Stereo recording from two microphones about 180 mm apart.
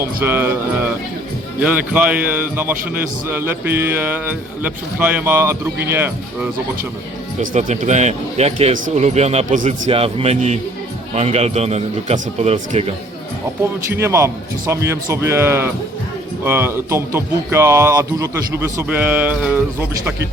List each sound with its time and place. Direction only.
0.0 s speech: 10° right (ahead or behind)
7.5 s a man's voice: 40° right (ahead or behind)
13.9 s speech: 15° right (ahead or behind)